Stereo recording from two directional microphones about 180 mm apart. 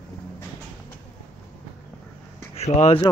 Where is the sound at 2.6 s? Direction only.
35° left (ahead or behind).